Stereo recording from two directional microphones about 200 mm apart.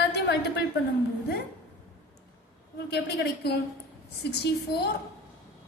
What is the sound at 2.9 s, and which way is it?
A woman's voice, 55° left (ahead or behind).